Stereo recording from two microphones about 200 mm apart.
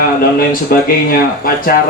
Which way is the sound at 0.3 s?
45° left (ahead or behind).